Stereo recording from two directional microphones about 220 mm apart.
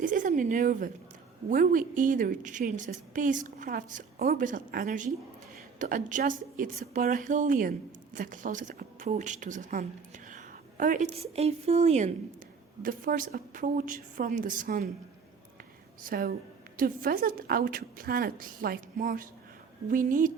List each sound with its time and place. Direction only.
0.0 s a sound: 35° right (ahead or behind)
1.5 s a woman's voice: 35° right (ahead or behind)
16.0 s a woman's voice: 40° right (ahead or behind)